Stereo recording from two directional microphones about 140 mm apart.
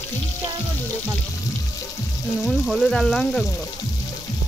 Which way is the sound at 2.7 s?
5° left (ahead or behind).